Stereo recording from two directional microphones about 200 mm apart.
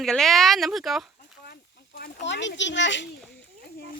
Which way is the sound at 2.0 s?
65° left (ahead or behind).